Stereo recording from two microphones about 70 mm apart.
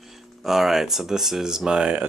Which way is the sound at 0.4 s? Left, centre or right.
Centre.